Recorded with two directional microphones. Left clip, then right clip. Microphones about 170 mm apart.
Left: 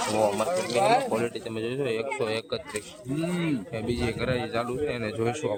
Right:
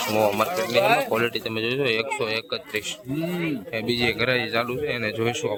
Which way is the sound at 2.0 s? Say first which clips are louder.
Right 3 dB; 10° left (ahead or behind).